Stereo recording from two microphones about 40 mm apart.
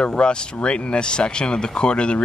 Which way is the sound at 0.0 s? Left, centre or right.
Left.